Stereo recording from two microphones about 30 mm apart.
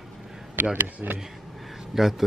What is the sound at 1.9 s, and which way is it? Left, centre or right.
Speech, centre.